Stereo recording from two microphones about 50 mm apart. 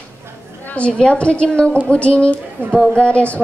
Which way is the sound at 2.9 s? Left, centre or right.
Left.